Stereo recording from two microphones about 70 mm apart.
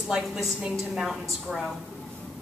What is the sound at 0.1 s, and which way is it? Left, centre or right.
A woman's voice, centre.